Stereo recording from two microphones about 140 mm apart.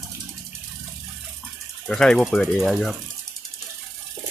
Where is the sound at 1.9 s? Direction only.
5° left (ahead or behind).